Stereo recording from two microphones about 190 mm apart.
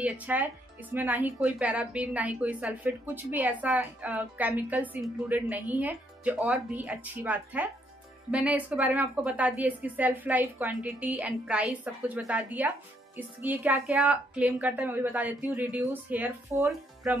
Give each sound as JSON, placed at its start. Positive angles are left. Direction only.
{"t": 0.0, "sound": "a woman's voice", "side_deg": -10}
{"t": 16.7, "sound": "speech", "side_deg": 0}